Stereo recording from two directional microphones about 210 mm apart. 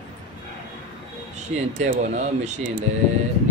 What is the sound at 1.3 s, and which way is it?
A man's voice, 35° right (ahead or behind).